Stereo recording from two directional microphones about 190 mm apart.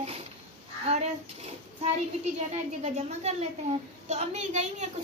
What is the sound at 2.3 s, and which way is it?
A child's voice, 35° right (ahead or behind).